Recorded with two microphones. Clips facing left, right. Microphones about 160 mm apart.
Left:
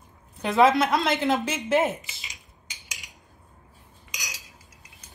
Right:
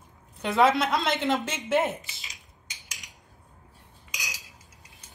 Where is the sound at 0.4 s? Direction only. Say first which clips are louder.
Left 3 dB; centre (ahead or behind).